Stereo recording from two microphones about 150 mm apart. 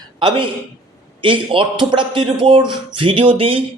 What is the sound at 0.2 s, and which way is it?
Speech, 30° right (ahead or behind).